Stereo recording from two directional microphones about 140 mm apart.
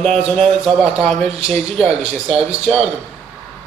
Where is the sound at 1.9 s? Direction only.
45° right (ahead or behind).